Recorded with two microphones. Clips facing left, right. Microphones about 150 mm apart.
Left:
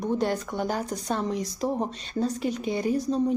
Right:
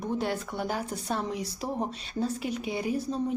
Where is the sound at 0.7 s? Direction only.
5° right (ahead or behind).